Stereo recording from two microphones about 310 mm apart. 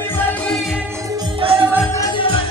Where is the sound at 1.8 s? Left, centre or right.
Centre.